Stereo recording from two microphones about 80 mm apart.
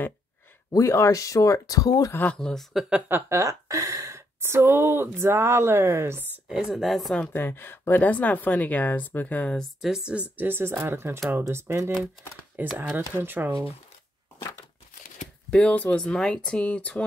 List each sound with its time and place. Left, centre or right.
0.7 s speech: left
2.3 s speech: centre
2.7 s speech: centre
3.1 s speech: right
3.3 s speech: right
6.5 s speech: centre
7.3 s speech: left
9.6 s speech: centre
10.3 s speech: right
12.6 s speech: right
15.5 s speech: centre